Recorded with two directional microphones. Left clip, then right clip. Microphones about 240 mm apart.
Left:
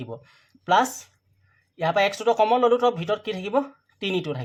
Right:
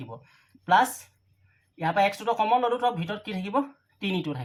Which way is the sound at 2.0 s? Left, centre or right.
Left.